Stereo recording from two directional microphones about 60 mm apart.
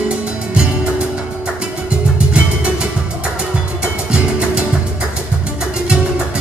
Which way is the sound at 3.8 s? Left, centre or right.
Centre.